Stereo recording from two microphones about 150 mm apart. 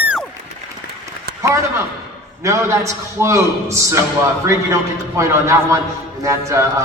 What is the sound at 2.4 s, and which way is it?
A man's voice, 20° right (ahead or behind).